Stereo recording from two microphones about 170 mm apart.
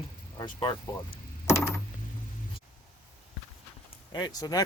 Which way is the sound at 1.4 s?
15° left (ahead or behind).